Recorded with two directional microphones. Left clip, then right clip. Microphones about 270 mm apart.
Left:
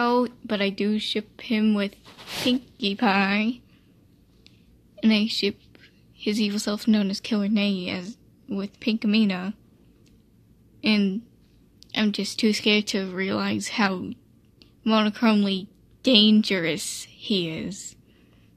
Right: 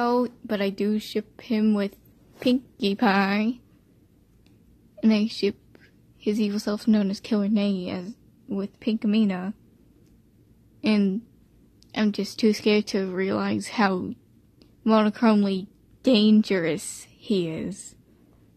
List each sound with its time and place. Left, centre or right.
0.0 s speech: centre
5.0 s a woman's voice: centre
10.8 s a woman's voice: centre